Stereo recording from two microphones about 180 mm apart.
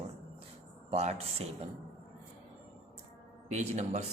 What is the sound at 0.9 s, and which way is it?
Speech, 35° right (ahead or behind).